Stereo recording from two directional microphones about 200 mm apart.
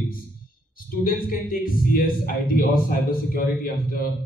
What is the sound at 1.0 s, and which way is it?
A man's voice, 45° left (ahead or behind).